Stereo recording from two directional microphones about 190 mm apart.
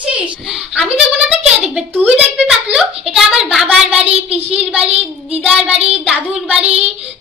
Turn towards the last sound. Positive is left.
turn(degrees=-35)  # may be behind; listen again after turning